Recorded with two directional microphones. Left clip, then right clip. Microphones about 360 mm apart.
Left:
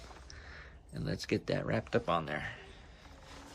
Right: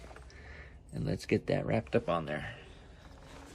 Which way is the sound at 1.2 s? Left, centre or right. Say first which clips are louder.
Right 3 dB; centre.